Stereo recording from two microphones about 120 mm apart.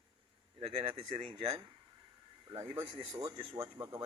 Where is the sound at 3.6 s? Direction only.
45° right (ahead or behind).